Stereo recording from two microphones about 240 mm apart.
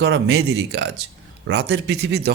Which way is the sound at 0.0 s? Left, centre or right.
Right.